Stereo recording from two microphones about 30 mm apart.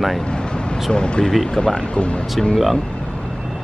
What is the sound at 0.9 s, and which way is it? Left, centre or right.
Speech, left.